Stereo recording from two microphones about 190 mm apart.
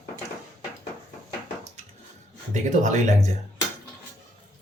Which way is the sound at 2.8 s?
35° right (ahead or behind).